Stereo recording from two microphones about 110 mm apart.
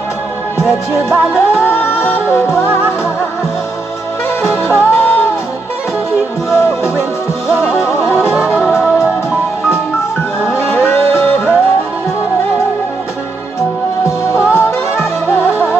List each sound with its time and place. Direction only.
0.6 s music: 20° left (ahead or behind)
4.4 s music: 20° left (ahead or behind)
6.5 s music: 25° left (ahead or behind)
8.6 s music: centre (ahead or behind)
10.7 s music: 20° left (ahead or behind)
14.0 s music: 25° left (ahead or behind)